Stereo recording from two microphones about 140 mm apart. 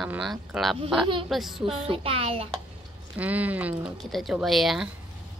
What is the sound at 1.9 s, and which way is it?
Speech, 40° right (ahead or behind).